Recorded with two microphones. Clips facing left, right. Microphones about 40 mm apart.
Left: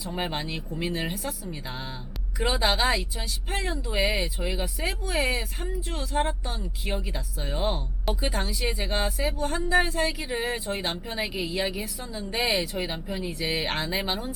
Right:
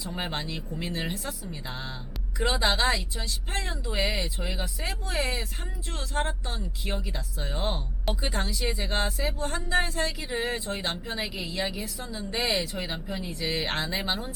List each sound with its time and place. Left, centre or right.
0.0 s speech: centre
0.4 s speech: left
0.8 s speech: centre
2.4 s speech: centre
10.2 s speech: centre